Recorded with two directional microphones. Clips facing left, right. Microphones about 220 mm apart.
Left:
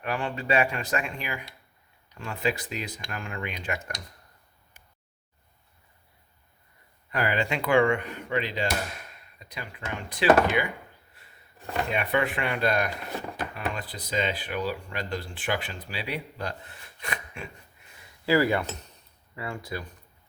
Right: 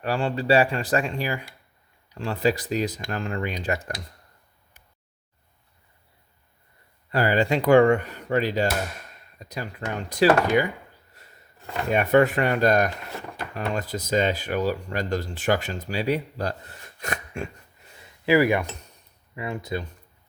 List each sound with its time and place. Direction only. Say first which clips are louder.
0.0 s speech: right 5 dB; 30° right (ahead or behind)
7.1 s speech: right 6 dB; 35° right (ahead or behind)
11.1 s a sound: right 4 dB; 40° right (ahead or behind)
11.9 s speech: right 9 dB; 45° right (ahead or behind)
18.3 s speech: right 3 dB; 15° right (ahead or behind)